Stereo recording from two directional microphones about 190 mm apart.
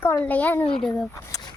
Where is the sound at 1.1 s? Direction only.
15° left (ahead or behind).